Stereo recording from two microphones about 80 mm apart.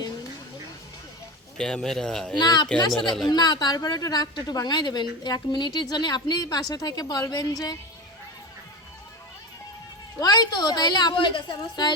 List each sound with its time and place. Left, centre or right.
1.5 s speech: centre
2.4 s a woman's voice: left
10.2 s a woman's voice: left